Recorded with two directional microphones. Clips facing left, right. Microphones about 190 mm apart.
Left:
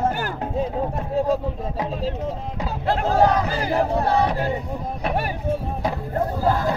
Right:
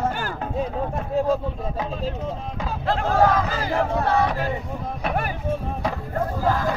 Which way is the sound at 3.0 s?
30° left (ahead or behind).